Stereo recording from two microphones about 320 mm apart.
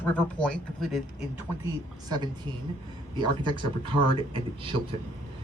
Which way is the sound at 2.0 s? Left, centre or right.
Centre.